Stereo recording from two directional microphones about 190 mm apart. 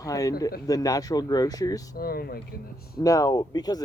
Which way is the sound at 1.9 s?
50° left (ahead or behind).